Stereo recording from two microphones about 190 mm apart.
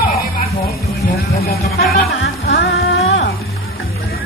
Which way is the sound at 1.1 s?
55° left (ahead or behind).